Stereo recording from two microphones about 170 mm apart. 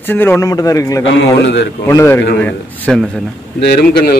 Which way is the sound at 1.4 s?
90° left.